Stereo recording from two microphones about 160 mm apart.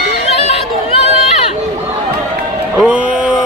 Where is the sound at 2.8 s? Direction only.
5° right (ahead or behind).